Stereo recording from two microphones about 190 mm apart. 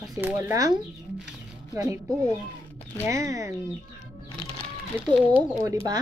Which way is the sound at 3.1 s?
15° right (ahead or behind).